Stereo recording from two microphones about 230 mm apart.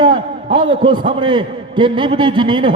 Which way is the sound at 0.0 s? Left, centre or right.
Right.